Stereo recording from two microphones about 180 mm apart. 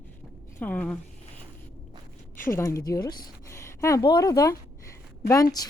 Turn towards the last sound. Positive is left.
turn(degrees=20)  # may be behind; listen again after turning